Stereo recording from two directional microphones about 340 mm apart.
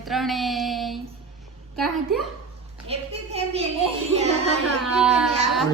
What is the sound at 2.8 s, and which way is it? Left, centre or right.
Speech, centre.